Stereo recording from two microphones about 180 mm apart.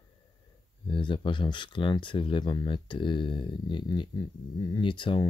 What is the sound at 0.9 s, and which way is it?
Speech, 25° left (ahead or behind).